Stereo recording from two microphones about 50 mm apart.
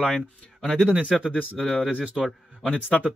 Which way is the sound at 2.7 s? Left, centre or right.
Left.